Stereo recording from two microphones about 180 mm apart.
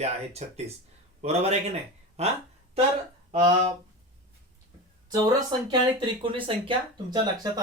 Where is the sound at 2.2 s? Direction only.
35° right (ahead or behind).